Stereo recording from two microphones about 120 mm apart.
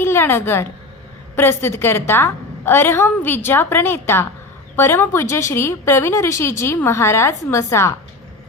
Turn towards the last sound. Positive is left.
turn(degrees=25)  # may be behind; listen again after turning